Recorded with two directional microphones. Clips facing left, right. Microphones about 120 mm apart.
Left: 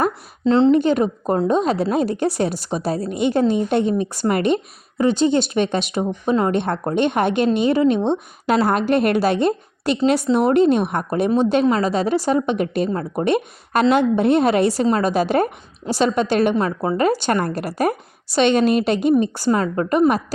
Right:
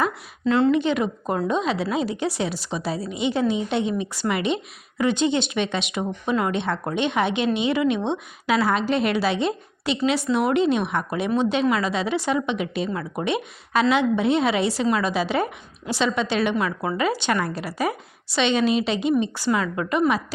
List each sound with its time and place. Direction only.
0.4 s a woman's voice: 30° left (ahead or behind)
0.7 s a woman's voice: 45° left (ahead or behind)